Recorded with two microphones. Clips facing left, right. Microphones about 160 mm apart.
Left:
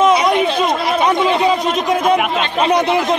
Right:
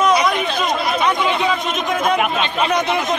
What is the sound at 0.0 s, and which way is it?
Chatter, 25° left (ahead or behind).